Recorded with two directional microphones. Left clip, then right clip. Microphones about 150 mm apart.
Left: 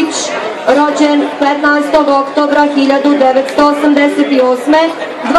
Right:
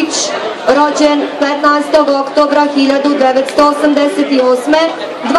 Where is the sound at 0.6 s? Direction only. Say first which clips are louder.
Even; 20° left (ahead or behind).